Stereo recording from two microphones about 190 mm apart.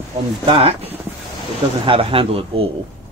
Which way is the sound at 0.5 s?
30° right (ahead or behind).